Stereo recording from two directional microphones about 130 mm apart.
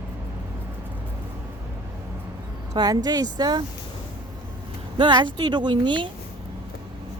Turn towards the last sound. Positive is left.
turn(degrees=-35)  # may be behind; listen again after turning